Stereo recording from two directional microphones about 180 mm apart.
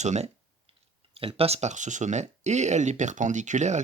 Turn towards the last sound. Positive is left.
turn(degrees=-40)  # may be behind; listen again after turning